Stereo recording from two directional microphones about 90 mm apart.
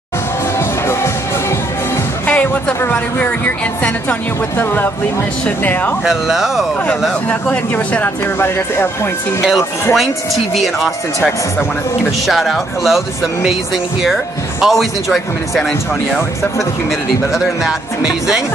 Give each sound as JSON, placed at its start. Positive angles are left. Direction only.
{"t": 0.6, "sound": "music", "side_deg": 30}
{"t": 2.2, "sound": "music", "side_deg": 15}
{"t": 2.8, "sound": "speech", "side_deg": 15}
{"t": 6.0, "sound": "speech", "side_deg": -5}
{"t": 7.2, "sound": "speech", "side_deg": 20}
{"t": 9.9, "sound": "speech", "side_deg": 0}
{"t": 12.3, "sound": "speech", "side_deg": 0}
{"t": 14.6, "sound": "speech", "side_deg": 0}
{"t": 17.3, "sound": "speech", "side_deg": -5}